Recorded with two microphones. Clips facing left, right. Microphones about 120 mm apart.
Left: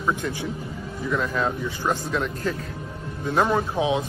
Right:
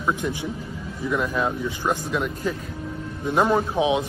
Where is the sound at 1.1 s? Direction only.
10° right (ahead or behind).